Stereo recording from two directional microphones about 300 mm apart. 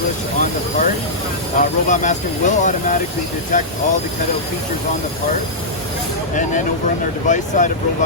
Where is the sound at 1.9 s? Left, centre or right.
Left.